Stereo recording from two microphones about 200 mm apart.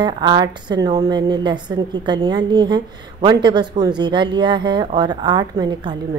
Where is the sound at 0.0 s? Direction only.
20° right (ahead or behind).